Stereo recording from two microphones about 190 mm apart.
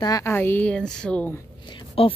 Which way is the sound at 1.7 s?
25° left (ahead or behind).